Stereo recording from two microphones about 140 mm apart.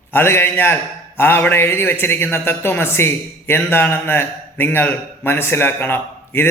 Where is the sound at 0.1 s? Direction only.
15° left (ahead or behind).